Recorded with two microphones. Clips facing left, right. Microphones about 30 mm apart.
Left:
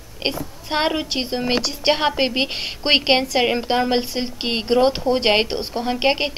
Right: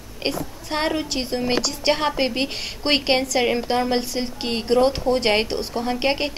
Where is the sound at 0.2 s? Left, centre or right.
Left.